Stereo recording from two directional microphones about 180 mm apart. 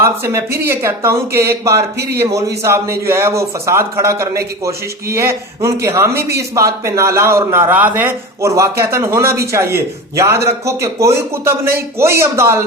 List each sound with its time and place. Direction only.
0.0 s a man's voice: 15° right (ahead or behind)
6.1 s a man's voice: 60° right (ahead or behind)
6.6 s a man's voice: 15° right (ahead or behind)